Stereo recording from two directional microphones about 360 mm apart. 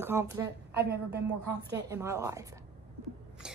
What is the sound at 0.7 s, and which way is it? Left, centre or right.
Speech, right.